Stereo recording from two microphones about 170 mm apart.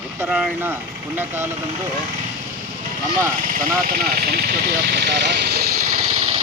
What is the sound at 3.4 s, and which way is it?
Speech, 55° right (ahead or behind).